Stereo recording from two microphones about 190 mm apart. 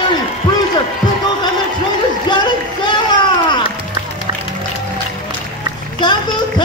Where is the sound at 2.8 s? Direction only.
25° left (ahead or behind).